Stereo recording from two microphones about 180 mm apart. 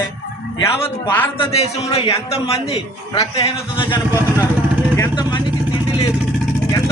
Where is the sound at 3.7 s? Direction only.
30° left (ahead or behind).